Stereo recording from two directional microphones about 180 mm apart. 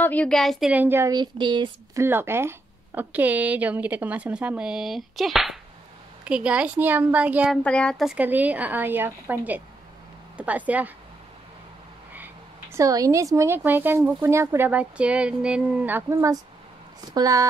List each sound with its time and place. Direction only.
0.0 s speech: 10° left (ahead or behind); by 2.0 s 25° right (ahead or behind)
2.0 s speech: 10° right (ahead or behind)
7.6 s speech: 5° left (ahead or behind)
12.7 s speech: 20° right (ahead or behind)